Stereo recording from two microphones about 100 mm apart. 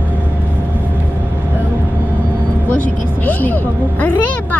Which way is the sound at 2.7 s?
15° left (ahead or behind).